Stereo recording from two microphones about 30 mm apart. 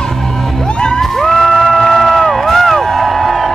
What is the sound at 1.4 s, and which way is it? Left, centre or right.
Music, centre.